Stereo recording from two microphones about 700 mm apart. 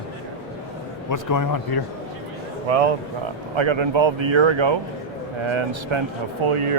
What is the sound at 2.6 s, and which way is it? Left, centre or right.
Speech, right.